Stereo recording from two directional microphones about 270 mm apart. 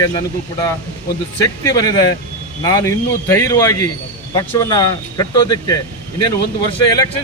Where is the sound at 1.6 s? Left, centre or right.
Centre.